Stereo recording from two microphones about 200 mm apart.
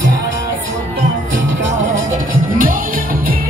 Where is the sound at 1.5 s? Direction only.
70° right (ahead or behind).